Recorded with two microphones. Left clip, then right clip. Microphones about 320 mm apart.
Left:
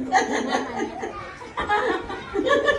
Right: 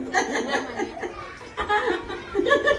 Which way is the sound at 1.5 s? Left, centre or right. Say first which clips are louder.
Left 1 dB; centre.